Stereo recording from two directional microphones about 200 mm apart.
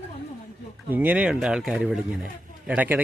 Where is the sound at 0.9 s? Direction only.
10° right (ahead or behind).